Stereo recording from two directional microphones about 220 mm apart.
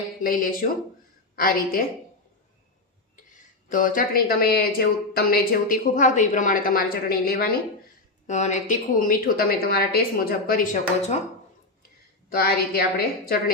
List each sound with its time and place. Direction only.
0.2 s speech: 40° left (ahead or behind)
3.7 s speech: 40° left (ahead or behind)
8.3 s speech: 30° left (ahead or behind)
12.3 s a woman's voice: 45° left (ahead or behind)